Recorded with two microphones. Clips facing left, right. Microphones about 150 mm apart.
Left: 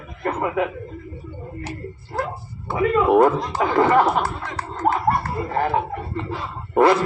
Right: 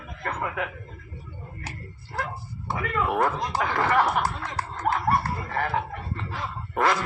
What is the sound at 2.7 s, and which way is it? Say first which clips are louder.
Speech: left 10 dB; 30° left (ahead or behind).